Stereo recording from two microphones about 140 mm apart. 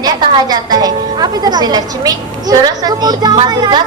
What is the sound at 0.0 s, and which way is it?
A woman's voice, 30° right (ahead or behind).